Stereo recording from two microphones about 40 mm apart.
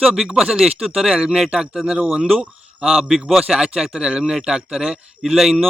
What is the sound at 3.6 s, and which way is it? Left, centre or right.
Speech, right.